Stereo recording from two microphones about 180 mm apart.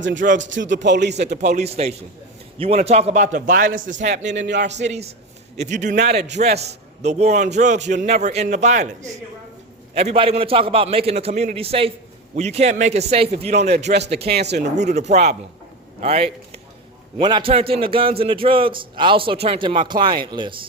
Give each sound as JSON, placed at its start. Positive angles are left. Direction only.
{"t": 0.0, "sound": "speech", "side_deg": -90}
{"t": 1.1, "sound": "a man's voice", "side_deg": -40}
{"t": 3.3, "sound": "a man's voice", "side_deg": -50}
{"t": 4.3, "sound": "speech", "side_deg": -75}
{"t": 4.8, "sound": "a man's voice", "side_deg": -35}
{"t": 13.9, "sound": "speech", "side_deg": -65}
{"t": 14.8, "sound": "a man's voice", "side_deg": -40}